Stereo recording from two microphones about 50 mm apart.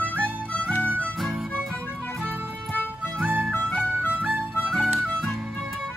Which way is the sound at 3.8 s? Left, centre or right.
Right.